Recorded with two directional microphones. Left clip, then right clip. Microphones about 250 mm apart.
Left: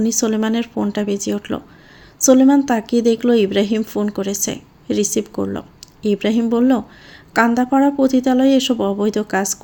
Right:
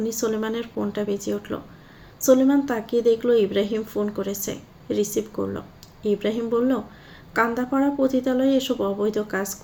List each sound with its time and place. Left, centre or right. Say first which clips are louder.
0.0 s a woman's voice: left 6 dB; left